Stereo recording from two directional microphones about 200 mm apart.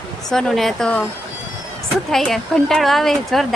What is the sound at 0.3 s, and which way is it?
Speech, centre (ahead or behind).